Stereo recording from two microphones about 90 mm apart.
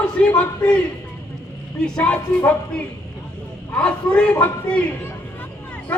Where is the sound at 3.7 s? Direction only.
10° left (ahead or behind).